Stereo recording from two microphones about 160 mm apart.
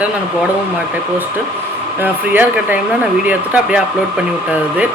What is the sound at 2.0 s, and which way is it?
Speech, 10° right (ahead or behind).